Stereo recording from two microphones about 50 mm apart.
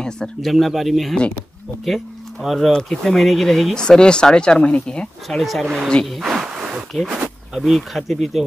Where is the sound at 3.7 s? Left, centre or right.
Centre.